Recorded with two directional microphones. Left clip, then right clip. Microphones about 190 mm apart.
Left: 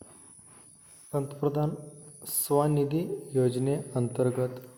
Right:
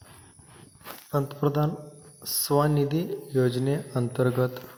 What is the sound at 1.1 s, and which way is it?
Speech, 10° right (ahead or behind).